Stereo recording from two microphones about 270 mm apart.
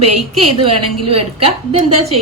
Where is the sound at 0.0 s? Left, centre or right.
Right.